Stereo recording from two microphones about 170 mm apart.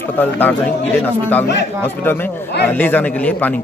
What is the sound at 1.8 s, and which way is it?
A man's voice, 10° left (ahead or behind).